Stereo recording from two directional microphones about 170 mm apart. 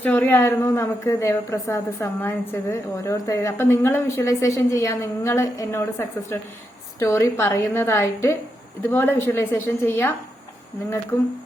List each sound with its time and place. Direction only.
0.0 s a woman's voice: 10° left (ahead or behind)
11.1 s a woman's voice: 15° left (ahead or behind)